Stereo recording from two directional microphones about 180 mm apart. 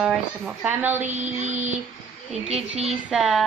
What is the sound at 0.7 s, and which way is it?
Speech, 10° right (ahead or behind).